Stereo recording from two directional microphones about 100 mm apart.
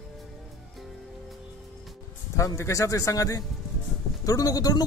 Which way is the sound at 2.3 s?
30° left (ahead or behind).